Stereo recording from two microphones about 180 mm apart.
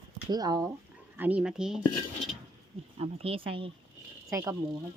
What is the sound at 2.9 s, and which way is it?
Speech, 35° right (ahead or behind).